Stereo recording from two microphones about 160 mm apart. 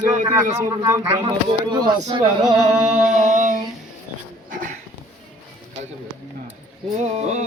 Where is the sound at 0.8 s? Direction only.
20° right (ahead or behind).